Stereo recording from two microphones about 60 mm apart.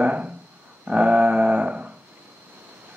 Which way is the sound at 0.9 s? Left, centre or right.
Right.